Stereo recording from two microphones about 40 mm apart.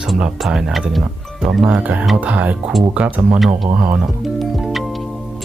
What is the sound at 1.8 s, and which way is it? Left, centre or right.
Speech, right.